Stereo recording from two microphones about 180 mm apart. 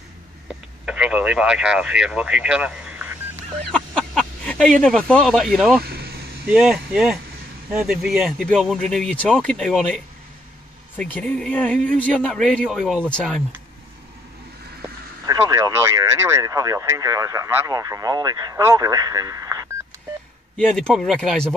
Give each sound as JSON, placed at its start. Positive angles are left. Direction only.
{"t": 0.8, "sound": "speech", "side_deg": -5}
{"t": 3.7, "sound": "speech", "side_deg": 5}
{"t": 5.9, "sound": "vehicle", "side_deg": -60}
{"t": 6.5, "sound": "speech", "side_deg": -5}
{"t": 15.2, "sound": "speech", "side_deg": -20}
{"t": 20.5, "sound": "speech", "side_deg": 5}